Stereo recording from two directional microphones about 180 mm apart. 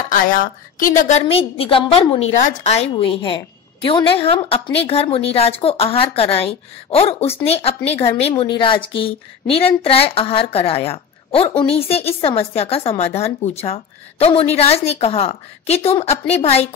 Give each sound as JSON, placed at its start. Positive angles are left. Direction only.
{"t": 0.1, "sound": "a woman's voice", "side_deg": 50}
{"t": 1.2, "sound": "speech", "side_deg": 30}
{"t": 2.3, "sound": "a woman's voice", "side_deg": 45}